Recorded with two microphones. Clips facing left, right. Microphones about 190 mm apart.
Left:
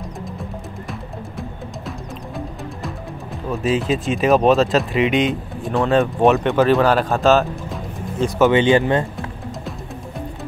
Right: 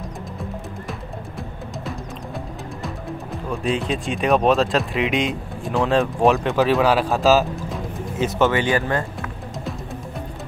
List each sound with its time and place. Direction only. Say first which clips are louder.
1.9 s music: right 1 dB; centre (ahead or behind)
3.6 s speech: left 4 dB; centre (ahead or behind)
8.4 s speech: left 6 dB; 20° left (ahead or behind)